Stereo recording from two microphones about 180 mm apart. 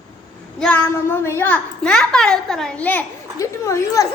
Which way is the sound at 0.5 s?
5° left (ahead or behind).